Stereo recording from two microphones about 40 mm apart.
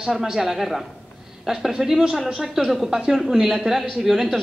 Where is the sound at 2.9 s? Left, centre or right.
Centre.